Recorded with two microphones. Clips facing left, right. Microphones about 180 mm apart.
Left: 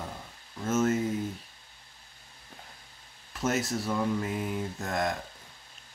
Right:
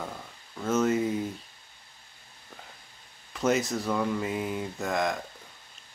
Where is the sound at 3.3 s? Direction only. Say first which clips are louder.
Right 3 dB; centre (ahead or behind).